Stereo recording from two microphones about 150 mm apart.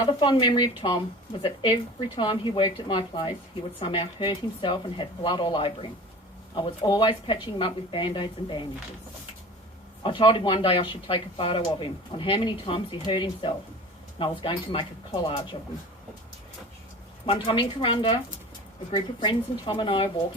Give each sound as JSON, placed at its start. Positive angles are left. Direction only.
{"t": 0.0, "sound": "speech", "side_deg": 30}
{"t": 10.0, "sound": "speech", "side_deg": 35}
{"t": 17.2, "sound": "speech", "side_deg": 35}